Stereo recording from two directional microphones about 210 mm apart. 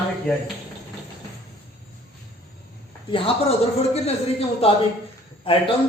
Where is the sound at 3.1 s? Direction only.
25° left (ahead or behind).